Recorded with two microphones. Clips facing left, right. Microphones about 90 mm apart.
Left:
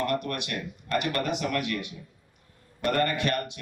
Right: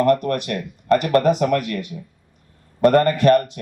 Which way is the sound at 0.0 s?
40° right (ahead or behind).